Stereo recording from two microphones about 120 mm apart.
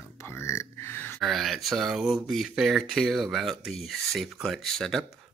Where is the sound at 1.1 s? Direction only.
Centre (ahead or behind).